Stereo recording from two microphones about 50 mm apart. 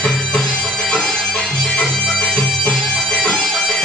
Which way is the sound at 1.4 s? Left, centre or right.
Centre.